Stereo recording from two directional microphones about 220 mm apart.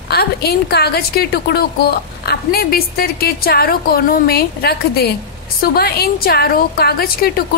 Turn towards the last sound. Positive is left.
turn(degrees=45)  # may be behind; listen again after turning